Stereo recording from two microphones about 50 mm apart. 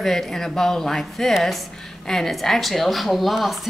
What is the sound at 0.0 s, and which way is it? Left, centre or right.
A woman's voice, centre.